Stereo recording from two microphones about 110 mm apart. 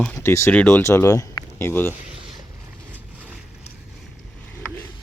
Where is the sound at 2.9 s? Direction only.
10° right (ahead or behind).